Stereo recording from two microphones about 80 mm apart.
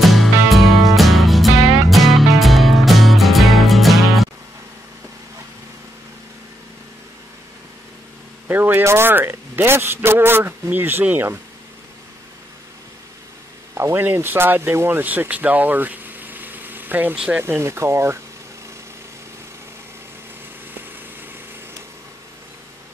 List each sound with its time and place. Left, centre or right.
0.0 s music: centre
8.5 s a man's voice: right
13.7 s speech: right